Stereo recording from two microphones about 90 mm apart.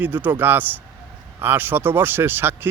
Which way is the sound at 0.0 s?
20° right (ahead or behind).